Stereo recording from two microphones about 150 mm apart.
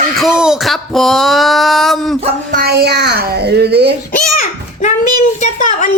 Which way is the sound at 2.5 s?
80° right.